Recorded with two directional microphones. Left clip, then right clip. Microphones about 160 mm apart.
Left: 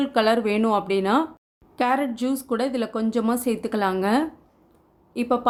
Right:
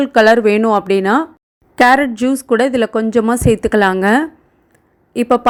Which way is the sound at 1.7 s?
50° right (ahead or behind).